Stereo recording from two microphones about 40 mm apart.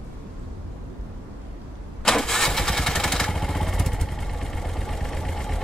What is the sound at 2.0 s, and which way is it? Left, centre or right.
Engine starting, centre.